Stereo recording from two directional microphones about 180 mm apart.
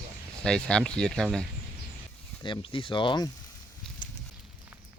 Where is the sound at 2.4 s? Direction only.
30° left (ahead or behind).